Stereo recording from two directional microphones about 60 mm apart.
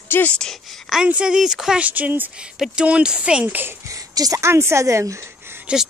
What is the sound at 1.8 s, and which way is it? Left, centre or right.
Speech, right.